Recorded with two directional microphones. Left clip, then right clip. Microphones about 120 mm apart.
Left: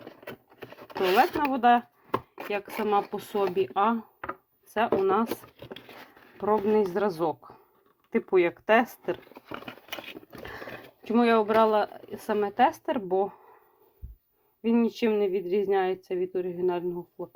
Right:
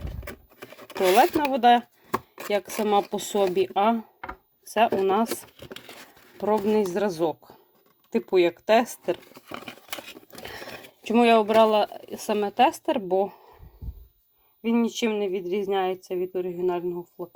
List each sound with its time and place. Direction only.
0.3 s patter: 15° right (ahead or behind)
1.5 s speech: 35° right (ahead or behind)
2.5 s speech: 45° right (ahead or behind)
5.0 s speech: 40° right (ahead or behind)
6.3 s speech: 30° right (ahead or behind)
10.3 s ratchet: 30° right (ahead or behind)
11.1 s speech: 30° right (ahead or behind)
14.6 s speech: 10° right (ahead or behind)